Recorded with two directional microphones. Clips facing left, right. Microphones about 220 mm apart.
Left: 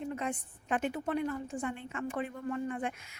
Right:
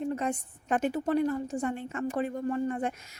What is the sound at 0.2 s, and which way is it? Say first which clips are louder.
A woman's voice: right 5 dB; 40° right (ahead or behind).